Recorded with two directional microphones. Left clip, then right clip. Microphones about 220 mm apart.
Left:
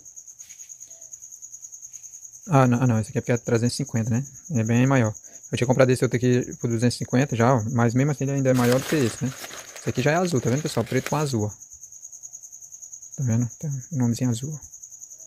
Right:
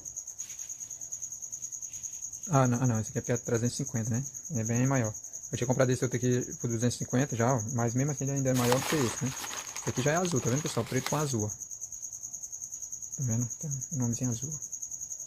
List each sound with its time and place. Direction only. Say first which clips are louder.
2.4 s speech: left 8 dB; 40° left (ahead or behind)
13.2 s speech: left 8 dB; 45° left (ahead or behind)